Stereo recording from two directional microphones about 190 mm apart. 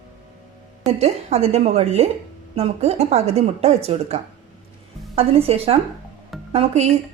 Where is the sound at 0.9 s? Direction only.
35° right (ahead or behind).